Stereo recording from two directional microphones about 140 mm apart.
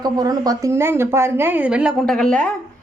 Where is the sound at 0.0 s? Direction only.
25° right (ahead or behind).